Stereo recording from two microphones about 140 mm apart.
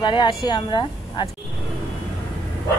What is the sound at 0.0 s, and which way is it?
Speech, 35° left (ahead or behind).